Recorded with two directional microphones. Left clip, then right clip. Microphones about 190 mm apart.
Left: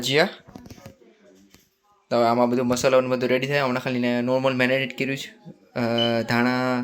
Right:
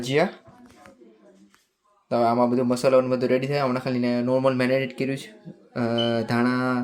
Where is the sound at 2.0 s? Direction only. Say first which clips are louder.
Left 1 dB; centre (ahead or behind).